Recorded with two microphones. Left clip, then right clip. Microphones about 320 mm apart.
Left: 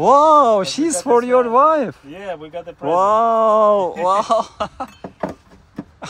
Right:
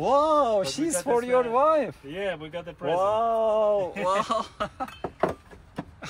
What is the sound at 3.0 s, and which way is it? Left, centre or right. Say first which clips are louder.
Speech: left 10 dB; left.